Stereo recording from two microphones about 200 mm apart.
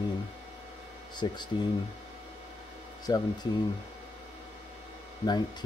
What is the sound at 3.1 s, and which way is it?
Speech, 20° left (ahead or behind).